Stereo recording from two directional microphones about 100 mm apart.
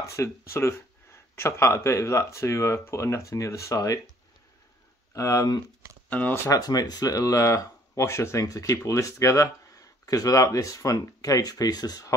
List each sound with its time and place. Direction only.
0.0 s speech: 30° left (ahead or behind)
5.1 s speech: 35° left (ahead or behind)
6.0 s speech: 15° left (ahead or behind)
6.6 s speech: 40° left (ahead or behind)